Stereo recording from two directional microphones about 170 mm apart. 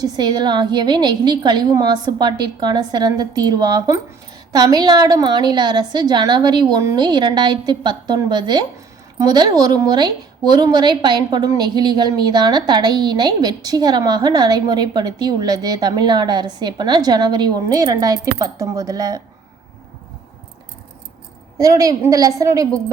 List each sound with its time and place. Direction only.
0.0 s a woman's voice: 25° right (ahead or behind)
21.6 s a woman's voice: 20° right (ahead or behind)